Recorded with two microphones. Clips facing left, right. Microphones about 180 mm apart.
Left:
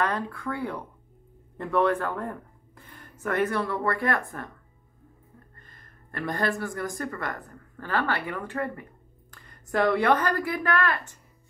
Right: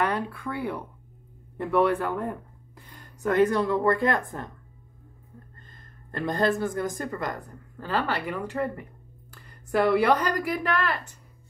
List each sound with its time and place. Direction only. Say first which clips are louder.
0.0 s speech: right 1 dB; 10° right (ahead or behind)
5.6 s a woman's voice: right 2 dB; 25° right (ahead or behind)